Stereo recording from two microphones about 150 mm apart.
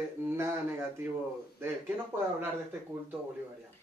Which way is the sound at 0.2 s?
15° right (ahead or behind).